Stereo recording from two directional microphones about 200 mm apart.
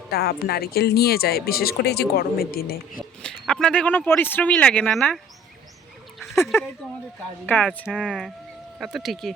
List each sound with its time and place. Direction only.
0.1 s speech: 50° left (ahead or behind)
3.0 s speech: 5° left (ahead or behind)
6.1 s a sound: centre (ahead or behind)
7.4 s speech: 10° left (ahead or behind)